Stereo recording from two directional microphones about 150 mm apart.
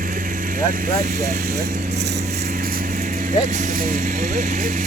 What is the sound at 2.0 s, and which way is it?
Speech, 80° right.